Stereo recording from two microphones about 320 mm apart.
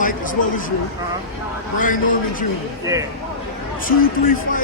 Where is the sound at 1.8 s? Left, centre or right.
Left.